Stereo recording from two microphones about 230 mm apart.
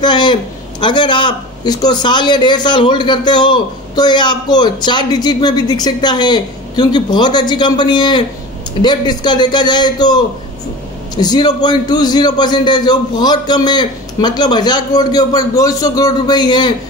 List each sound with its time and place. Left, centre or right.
0.0 s a man's voice: centre